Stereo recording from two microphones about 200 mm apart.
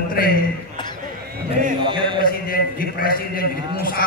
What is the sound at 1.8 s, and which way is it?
Mantra, 25° right (ahead or behind).